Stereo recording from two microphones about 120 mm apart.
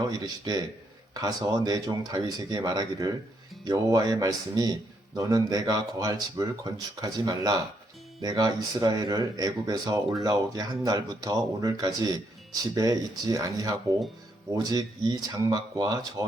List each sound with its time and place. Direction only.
0.1 s a man's voice: 35° right (ahead or behind)